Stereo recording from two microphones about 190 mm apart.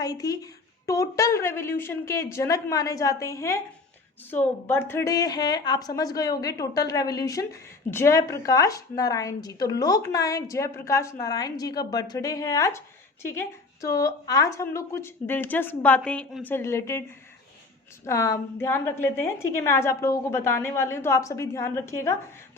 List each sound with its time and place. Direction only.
0.0 s a woman's voice: 20° left (ahead or behind)
18.0 s a woman's voice: 15° left (ahead or behind)